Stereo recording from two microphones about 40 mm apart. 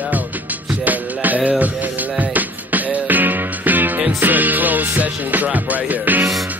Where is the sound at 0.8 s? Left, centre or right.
Right.